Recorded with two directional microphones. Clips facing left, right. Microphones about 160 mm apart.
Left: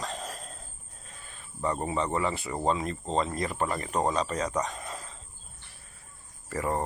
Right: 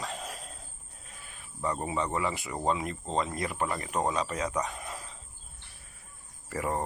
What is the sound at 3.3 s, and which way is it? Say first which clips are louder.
Speech: left 2 dB; 10° right (ahead or behind).